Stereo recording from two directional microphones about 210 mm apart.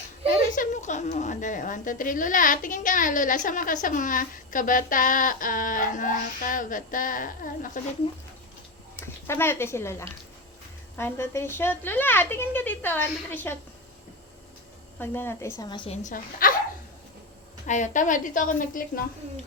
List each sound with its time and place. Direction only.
0.3 s a woman's voice: 40° left (ahead or behind)
8.0 s speech: 25° left (ahead or behind)
9.0 s a woman's voice: 10° left (ahead or behind)
14.9 s a woman's voice: 10° left (ahead or behind)
16.0 s a woman's voice: 40° left (ahead or behind)
17.7 s a woman's voice: 35° left (ahead or behind)